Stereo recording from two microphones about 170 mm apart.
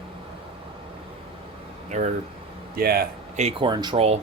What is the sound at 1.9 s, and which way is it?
Speech, 45° right (ahead or behind).